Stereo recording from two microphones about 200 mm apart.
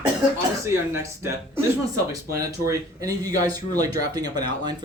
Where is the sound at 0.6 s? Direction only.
15° right (ahead or behind).